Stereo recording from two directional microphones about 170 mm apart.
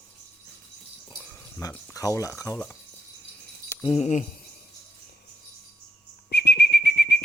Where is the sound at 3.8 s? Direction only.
35° left (ahead or behind).